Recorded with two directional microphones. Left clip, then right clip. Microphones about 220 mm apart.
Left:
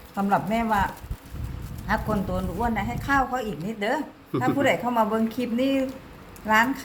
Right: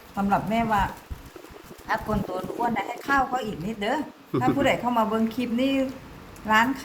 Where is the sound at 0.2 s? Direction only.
20° left (ahead or behind).